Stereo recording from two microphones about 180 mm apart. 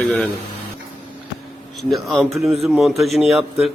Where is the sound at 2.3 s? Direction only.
15° right (ahead or behind).